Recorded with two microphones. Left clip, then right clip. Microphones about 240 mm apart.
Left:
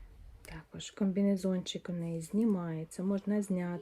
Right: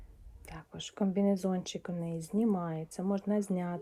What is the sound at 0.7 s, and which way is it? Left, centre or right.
Speech, right.